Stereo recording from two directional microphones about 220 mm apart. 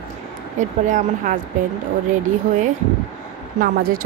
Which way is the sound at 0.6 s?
35° right (ahead or behind).